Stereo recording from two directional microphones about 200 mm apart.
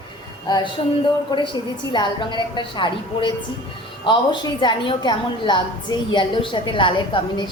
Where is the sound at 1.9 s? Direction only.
25° left (ahead or behind).